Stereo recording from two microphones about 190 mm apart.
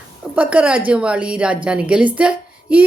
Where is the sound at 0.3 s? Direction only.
5° right (ahead or behind).